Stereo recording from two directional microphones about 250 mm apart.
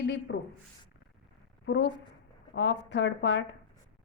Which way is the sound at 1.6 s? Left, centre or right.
Left.